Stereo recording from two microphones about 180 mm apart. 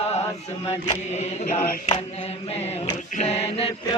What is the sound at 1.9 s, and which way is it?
Mantra, 35° left (ahead or behind).